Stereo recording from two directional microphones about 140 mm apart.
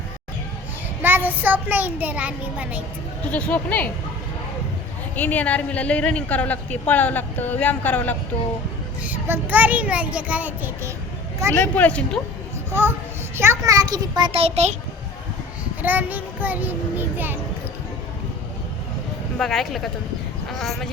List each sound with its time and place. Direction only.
1.0 s a child's voice: 15° right (ahead or behind)
3.3 s speech: 10° left (ahead or behind)
5.1 s speech: 10° left (ahead or behind)
9.0 s a child's voice: 15° right (ahead or behind)
11.5 s speech: 10° left (ahead or behind)
13.3 s a child's voice: 20° right (ahead or behind); by 14.8 s 50° right (ahead or behind)
15.8 s a child's voice: 10° right (ahead or behind)
19.4 s speech: centre (ahead or behind)